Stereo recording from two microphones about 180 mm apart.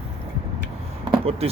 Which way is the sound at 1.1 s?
30° right (ahead or behind).